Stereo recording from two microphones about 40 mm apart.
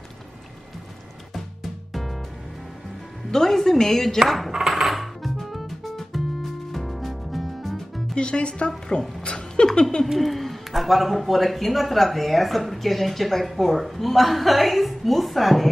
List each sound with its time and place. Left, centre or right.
1.3 s music: centre
3.3 s a woman's voice: centre
4.5 s music: centre
8.1 s speech: left
9.2 s a sound: left
10.1 s a man's voice: centre